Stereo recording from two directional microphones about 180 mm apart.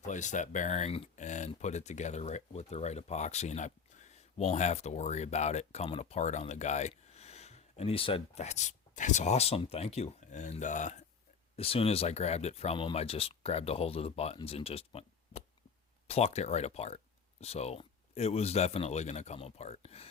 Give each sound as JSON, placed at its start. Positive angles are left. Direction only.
{"t": 0.0, "sound": "speech", "side_deg": 40}